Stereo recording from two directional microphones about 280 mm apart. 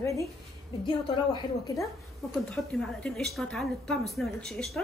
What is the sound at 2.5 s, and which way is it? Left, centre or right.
Speech, centre.